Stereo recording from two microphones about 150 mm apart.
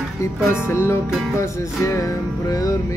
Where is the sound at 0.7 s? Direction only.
15° left (ahead or behind).